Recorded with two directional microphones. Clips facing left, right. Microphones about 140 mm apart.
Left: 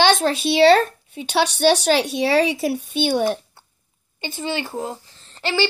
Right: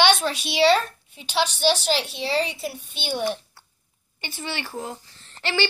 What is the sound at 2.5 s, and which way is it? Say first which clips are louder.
Speech: left 10 dB; 90° left.